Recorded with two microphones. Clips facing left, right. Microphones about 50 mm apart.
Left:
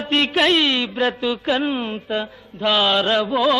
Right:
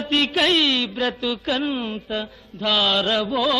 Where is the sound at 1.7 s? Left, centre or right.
Centre.